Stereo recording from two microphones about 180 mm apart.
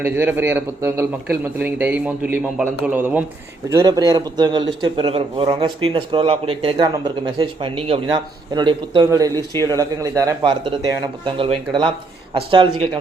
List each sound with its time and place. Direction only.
0.0 s speech: 10° right (ahead or behind)
3.7 s speech: 20° right (ahead or behind)